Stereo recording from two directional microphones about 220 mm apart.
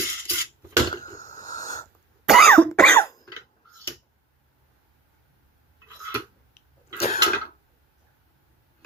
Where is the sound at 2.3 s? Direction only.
Centre (ahead or behind).